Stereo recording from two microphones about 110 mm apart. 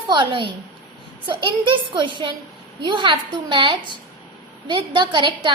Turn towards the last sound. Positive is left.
turn(degrees=-45)  # may be behind; listen again after turning